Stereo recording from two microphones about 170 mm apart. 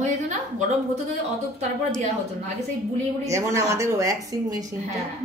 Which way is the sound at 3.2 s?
20° right (ahead or behind).